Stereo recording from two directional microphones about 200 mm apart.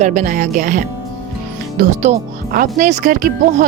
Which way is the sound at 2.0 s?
40° right (ahead or behind).